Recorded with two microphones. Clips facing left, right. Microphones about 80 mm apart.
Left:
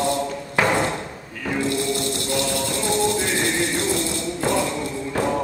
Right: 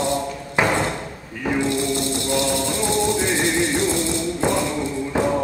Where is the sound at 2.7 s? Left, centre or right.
Centre.